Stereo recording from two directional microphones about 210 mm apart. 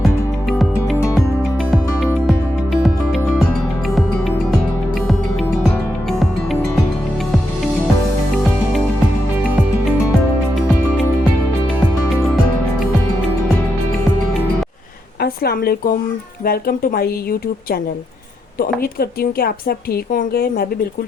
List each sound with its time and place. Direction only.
0.5 s music: 5° left (ahead or behind)
6.1 s music: centre (ahead or behind)
15.2 s a sound: 50° left (ahead or behind)
16.4 s a woman's voice: 45° left (ahead or behind)
18.6 s a woman's voice: 45° left (ahead or behind)